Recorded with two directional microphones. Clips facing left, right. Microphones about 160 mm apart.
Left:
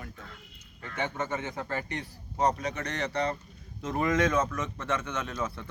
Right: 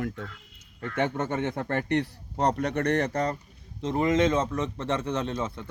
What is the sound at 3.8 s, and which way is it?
Speech, 25° right (ahead or behind).